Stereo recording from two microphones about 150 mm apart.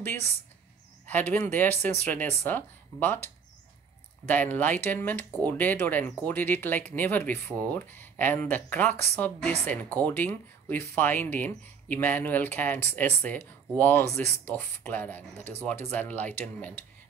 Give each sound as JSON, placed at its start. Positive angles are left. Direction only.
{"t": 1.0, "sound": "speech", "side_deg": 10}
{"t": 4.3, "sound": "speech", "side_deg": 10}